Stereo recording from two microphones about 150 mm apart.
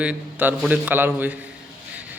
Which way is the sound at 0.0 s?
10° right (ahead or behind).